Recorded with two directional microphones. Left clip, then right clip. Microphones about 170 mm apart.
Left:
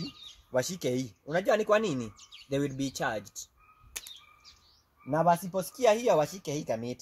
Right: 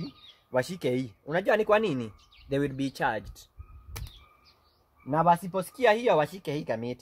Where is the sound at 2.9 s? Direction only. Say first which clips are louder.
Right 4 dB; 30° right (ahead or behind).